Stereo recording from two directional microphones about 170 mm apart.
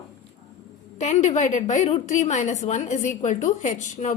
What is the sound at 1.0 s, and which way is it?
A woman's voice, 40° left (ahead or behind).